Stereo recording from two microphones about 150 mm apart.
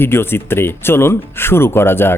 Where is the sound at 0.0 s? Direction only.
15° left (ahead or behind).